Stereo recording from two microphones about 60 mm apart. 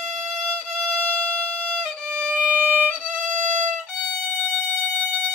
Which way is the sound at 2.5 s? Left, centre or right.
Right.